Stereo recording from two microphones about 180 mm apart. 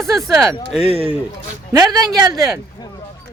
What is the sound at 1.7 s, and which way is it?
Speech, 20° right (ahead or behind).